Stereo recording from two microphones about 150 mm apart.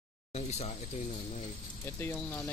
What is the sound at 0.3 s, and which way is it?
Speech, 50° left (ahead or behind).